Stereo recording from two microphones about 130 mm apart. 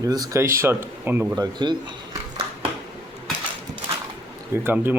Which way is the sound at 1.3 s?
35° right (ahead or behind).